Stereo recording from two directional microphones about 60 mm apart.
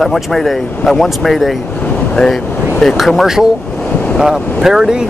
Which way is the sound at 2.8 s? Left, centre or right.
Centre.